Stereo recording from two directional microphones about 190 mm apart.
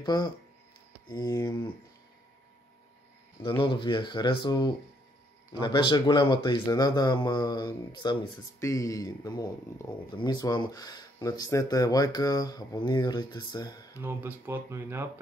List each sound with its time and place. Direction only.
0.0 s speech: 20° left (ahead or behind)
3.6 s speech: 25° left (ahead or behind)
13.9 s speech: 10° right (ahead or behind)